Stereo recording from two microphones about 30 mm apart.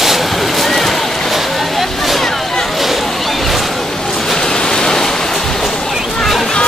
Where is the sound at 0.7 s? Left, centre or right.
Centre.